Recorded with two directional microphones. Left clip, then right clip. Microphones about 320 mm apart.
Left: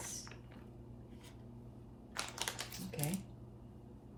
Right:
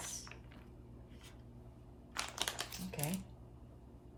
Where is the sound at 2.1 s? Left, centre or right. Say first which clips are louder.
Right 2 dB; centre.